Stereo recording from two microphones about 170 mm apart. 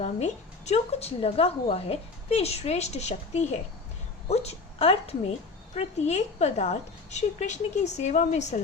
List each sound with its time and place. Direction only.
0.0 s a woman's voice: 40° left (ahead or behind)